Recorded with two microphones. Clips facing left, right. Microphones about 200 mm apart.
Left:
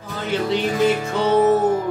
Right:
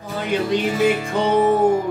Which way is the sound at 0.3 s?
15° right (ahead or behind).